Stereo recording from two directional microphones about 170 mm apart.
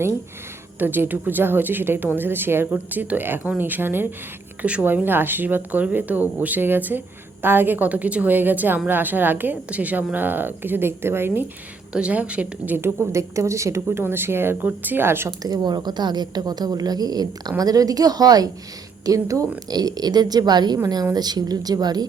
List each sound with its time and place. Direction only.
0.8 s a woman's voice: 10° right (ahead or behind)